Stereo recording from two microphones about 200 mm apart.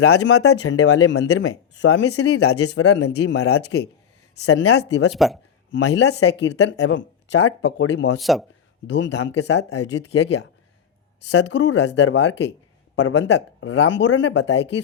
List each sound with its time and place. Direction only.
0.0 s speech: 90° left
4.4 s speech: 80° left
4.8 s speech: 60° left (ahead or behind)
5.1 s speech: centre (ahead or behind)
5.7 s speech: 60° left (ahead or behind)
8.2 s speech: centre (ahead or behind)
8.9 s speech: 65° left (ahead or behind)